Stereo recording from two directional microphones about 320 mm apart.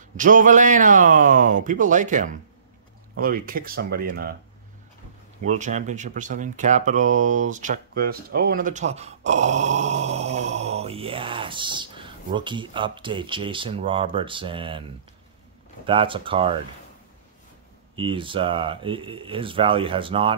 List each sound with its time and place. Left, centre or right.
0.2 s speech: right
5.4 s speech: right
17.9 s speech: centre